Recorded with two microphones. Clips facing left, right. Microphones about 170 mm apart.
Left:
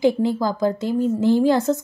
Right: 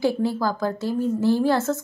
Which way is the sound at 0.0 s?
15° left (ahead or behind).